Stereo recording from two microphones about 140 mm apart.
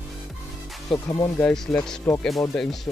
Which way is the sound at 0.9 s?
30° left (ahead or behind).